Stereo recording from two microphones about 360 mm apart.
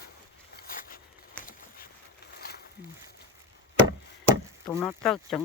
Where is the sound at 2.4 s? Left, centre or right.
Left.